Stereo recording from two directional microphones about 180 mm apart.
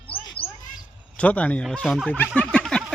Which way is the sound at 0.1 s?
10° left (ahead or behind).